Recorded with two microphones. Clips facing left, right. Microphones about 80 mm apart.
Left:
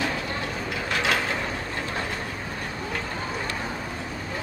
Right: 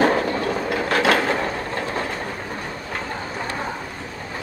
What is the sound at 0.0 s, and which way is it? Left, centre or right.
Train, right.